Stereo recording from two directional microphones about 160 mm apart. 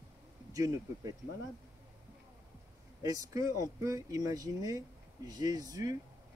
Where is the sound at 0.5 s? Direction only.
20° right (ahead or behind).